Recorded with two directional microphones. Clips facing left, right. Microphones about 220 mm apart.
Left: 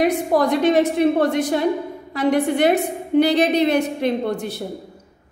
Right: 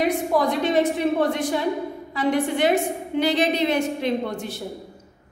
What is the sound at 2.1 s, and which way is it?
A woman's voice, 60° left (ahead or behind).